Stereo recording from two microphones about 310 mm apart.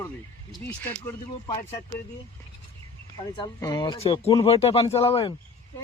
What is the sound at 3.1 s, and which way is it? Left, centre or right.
Speech, centre.